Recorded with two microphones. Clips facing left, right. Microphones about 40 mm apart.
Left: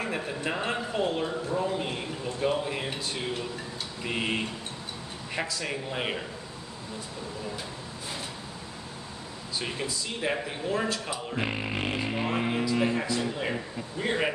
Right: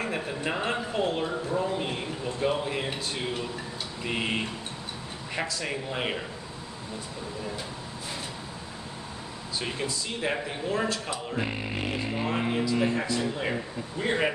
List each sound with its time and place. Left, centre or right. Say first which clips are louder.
0.0 s a man's voice: right 1 dB; centre
9.6 s a man's voice: right 1 dB; centre
12.9 s a man's voice: right 1 dB; centre